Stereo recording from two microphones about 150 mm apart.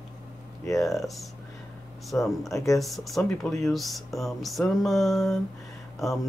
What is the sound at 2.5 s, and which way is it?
Speech, 20° left (ahead or behind).